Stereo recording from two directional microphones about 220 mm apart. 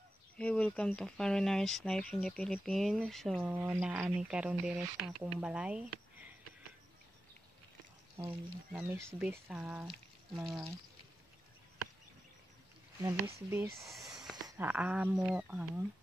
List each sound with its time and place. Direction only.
0.4 s speech: 5° left (ahead or behind)
8.7 s speech: 5° right (ahead or behind)
13.0 s speech: 10° right (ahead or behind)
14.3 s a sound: 20° right (ahead or behind)
14.7 s speech: 5° right (ahead or behind)